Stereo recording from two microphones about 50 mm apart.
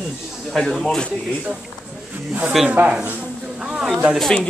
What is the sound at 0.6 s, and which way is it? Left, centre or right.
Speech, centre.